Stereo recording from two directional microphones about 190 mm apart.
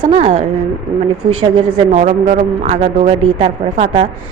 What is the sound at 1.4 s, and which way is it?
A woman's voice, 25° right (ahead or behind).